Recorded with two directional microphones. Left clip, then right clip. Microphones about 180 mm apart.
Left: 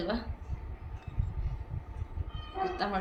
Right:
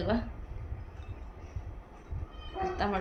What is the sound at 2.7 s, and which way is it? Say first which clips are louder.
Speech: right 2 dB; 45° right (ahead or behind).